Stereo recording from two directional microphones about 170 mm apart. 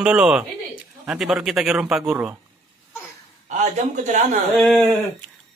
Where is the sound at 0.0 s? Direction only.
5° right (ahead or behind).